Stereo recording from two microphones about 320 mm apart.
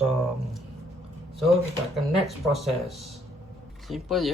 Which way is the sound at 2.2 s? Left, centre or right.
Centre.